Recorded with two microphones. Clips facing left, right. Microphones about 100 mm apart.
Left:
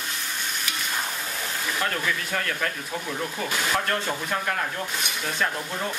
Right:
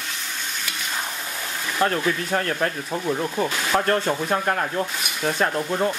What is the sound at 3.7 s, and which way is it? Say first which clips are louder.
Speech: right 9 dB; 35° right (ahead or behind).